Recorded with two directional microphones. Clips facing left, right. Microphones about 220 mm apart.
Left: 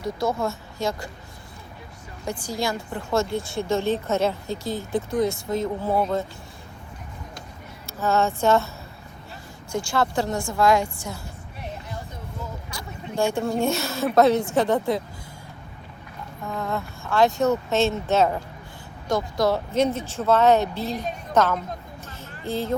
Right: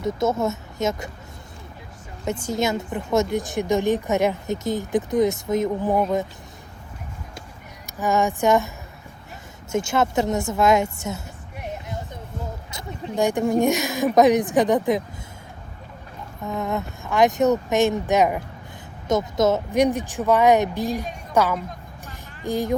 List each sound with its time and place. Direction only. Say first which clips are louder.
0.0 s speech: right 3 dB; 20° right (ahead or behind)
2.2 s a woman's voice: right 4 dB; 25° right (ahead or behind)
7.9 s a woman's voice: right 1 dB; 15° right (ahead or behind)
9.7 s speech: right 3 dB; 20° right (ahead or behind)
12.7 s a woman's voice: right 3 dB; 15° right (ahead or behind)
16.5 s a woman's voice: right 3 dB; 20° right (ahead or behind)
22.0 s vehicle: right 5 dB; 15° right (ahead or behind)